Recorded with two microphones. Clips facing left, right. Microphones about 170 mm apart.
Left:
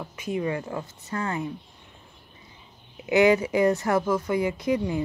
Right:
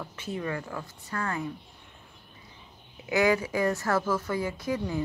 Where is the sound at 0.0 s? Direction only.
10° left (ahead or behind).